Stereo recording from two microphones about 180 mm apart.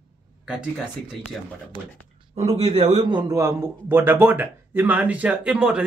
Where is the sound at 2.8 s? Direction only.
25° right (ahead or behind).